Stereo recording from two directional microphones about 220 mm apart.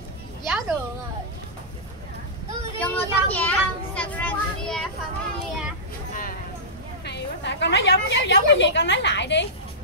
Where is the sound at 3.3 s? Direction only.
5° left (ahead or behind).